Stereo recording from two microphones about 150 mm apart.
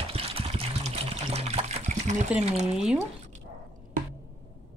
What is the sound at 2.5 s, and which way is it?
Speech, 50° right (ahead or behind).